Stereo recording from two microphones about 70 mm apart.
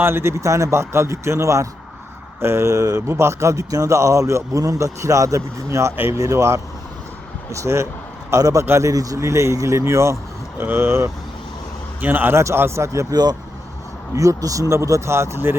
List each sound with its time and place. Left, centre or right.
0.0 s a man's voice: right
8.6 s a man's voice: right
8.9 s speech: right
10.6 s a man's voice: right
12.4 s speech: right
14.2 s a man's voice: right